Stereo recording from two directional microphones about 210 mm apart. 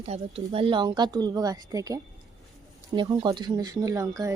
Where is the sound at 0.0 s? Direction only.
30° right (ahead or behind).